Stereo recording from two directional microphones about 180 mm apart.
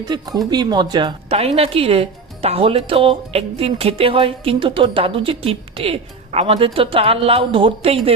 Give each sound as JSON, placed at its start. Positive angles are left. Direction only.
{"t": 0.0, "sound": "speech", "side_deg": -20}